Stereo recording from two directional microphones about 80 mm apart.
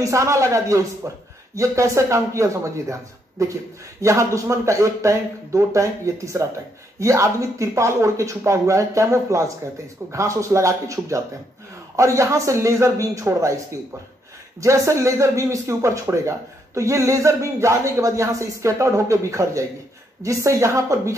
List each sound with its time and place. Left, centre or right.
0.0 s speech: right
14.6 s speech: right